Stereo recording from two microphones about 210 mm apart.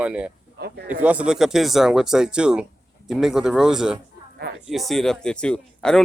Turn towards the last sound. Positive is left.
turn(degrees=5)  # may be behind; listen again after turning